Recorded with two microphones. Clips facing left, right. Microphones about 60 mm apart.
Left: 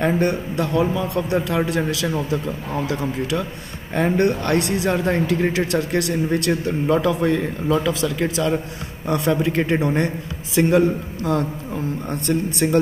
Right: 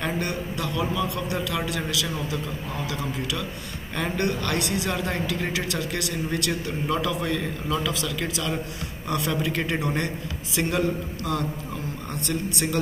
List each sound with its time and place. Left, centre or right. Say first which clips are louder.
0.0 s a man's voice: left 8 dB; left